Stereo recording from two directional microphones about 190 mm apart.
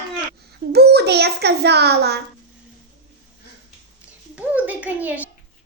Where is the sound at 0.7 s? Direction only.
55° right (ahead or behind).